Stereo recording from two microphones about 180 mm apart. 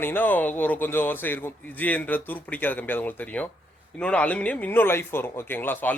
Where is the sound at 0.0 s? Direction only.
10° left (ahead or behind).